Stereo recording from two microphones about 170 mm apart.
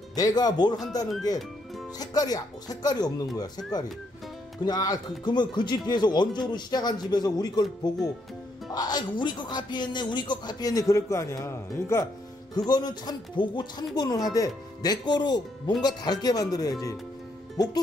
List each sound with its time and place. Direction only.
0.1 s speech: 25° left (ahead or behind)
8.7 s speech: 25° left (ahead or behind)